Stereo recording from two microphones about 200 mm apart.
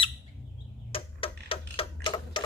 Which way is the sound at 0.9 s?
25° left (ahead or behind).